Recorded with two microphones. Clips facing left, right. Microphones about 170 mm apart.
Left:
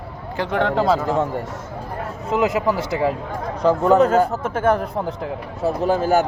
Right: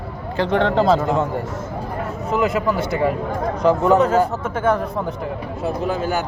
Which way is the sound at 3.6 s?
30° left (ahead or behind).